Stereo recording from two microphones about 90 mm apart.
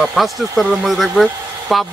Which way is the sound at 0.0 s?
Centre (ahead or behind).